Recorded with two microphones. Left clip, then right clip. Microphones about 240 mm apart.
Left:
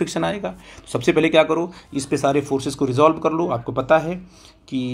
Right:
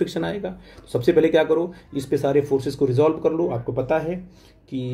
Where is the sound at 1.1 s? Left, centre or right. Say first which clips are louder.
Left 2 dB; left.